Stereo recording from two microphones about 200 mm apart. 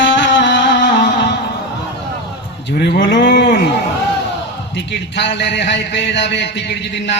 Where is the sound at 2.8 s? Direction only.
55° left (ahead or behind).